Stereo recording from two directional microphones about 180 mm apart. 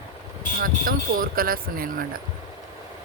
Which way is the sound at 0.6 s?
50° right (ahead or behind).